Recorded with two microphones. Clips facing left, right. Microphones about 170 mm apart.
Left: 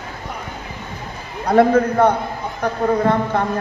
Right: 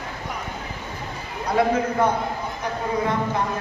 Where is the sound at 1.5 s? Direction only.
55° left (ahead or behind).